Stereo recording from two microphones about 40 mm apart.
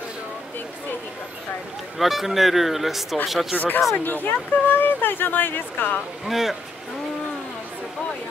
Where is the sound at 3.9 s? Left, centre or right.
Left.